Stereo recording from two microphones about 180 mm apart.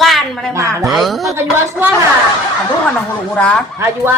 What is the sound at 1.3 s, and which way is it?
Speech, 10° right (ahead or behind).